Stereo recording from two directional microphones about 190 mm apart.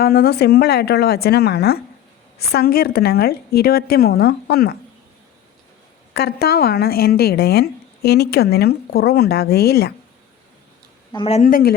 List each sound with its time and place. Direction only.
0.0 s a woman's voice: 55° left (ahead or behind)
6.1 s a woman's voice: 55° left (ahead or behind)
11.1 s speech: 30° left (ahead or behind)
11.4 s speech: 50° left (ahead or behind)